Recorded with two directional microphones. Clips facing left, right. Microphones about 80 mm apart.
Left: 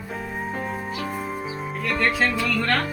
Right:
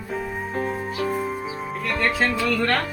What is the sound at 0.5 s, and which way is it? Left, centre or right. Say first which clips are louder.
Music: right 3 dB; centre.